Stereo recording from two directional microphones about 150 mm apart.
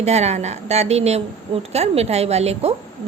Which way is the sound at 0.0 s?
45° right (ahead or behind).